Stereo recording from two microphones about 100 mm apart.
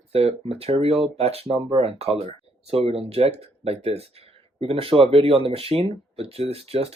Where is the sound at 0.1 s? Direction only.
85° right.